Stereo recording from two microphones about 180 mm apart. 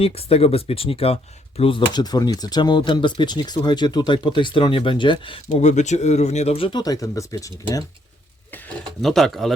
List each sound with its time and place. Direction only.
0.0 s speech: 35° left (ahead or behind)
5.5 s speech: 40° left (ahead or behind); by 9.5 s centre (ahead or behind)